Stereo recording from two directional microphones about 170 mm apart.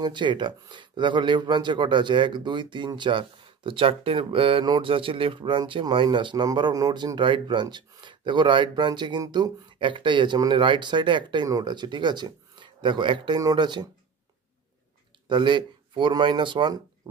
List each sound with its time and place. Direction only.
0.0 s speech: 25° right (ahead or behind)
15.2 s speech: 25° right (ahead or behind)
17.0 s dog: 20° right (ahead or behind)